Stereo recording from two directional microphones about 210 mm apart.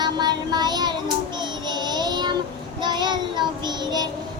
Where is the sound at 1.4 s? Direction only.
20° right (ahead or behind).